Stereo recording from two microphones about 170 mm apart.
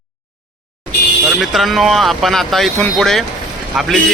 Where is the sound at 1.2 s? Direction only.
Centre (ahead or behind).